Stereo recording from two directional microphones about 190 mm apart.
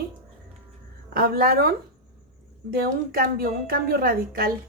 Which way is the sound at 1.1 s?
50° right (ahead or behind).